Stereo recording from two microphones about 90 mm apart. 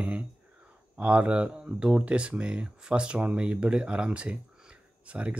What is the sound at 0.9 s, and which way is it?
Speech, 15° right (ahead or behind).